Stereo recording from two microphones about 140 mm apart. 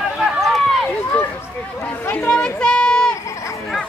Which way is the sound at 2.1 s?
10° left (ahead or behind).